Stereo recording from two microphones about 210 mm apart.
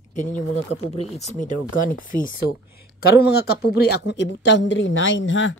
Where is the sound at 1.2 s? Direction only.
35° left (ahead or behind).